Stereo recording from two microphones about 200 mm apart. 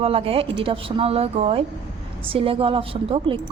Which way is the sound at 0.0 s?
30° right (ahead or behind).